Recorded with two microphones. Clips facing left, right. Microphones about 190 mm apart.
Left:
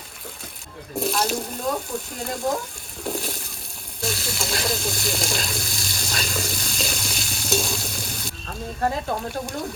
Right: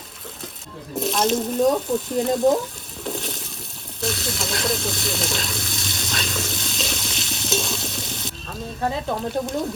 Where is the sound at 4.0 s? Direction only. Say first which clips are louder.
Right 2 dB; centre (ahead or behind).